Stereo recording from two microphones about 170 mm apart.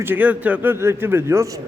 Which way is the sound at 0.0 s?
10° right (ahead or behind).